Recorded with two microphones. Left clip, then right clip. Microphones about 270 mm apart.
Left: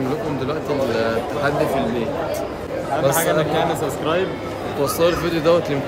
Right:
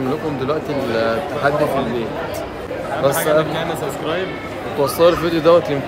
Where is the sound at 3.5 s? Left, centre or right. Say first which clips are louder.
Left 2 dB; left.